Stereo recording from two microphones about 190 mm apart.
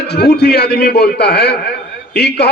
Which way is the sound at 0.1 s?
60° left (ahead or behind).